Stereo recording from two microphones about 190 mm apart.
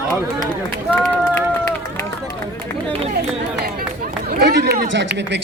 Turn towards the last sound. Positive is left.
turn(degrees=-65)  # may be behind; listen again after turning